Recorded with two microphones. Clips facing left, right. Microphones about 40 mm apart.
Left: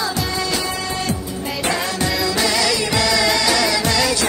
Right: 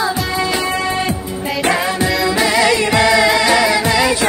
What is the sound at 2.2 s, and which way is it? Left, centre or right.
Music, right.